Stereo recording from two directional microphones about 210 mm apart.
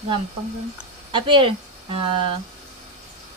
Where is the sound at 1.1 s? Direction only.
25° right (ahead or behind).